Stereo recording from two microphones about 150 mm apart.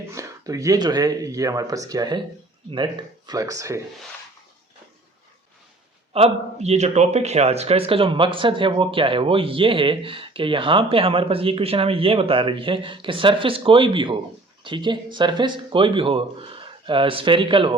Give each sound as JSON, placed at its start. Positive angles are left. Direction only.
{"t": 0.1, "sound": "speech", "side_deg": -20}
{"t": 6.1, "sound": "a man's voice", "side_deg": -45}